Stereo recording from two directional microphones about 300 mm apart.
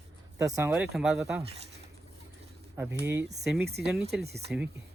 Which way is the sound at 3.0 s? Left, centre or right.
Centre.